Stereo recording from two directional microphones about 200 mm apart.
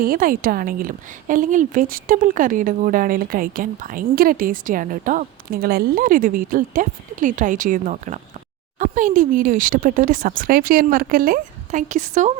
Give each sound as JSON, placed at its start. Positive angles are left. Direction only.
{"t": 0.0, "sound": "a woman's voice", "side_deg": -45}